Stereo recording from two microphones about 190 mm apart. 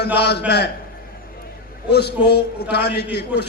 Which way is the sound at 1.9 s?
60° left (ahead or behind).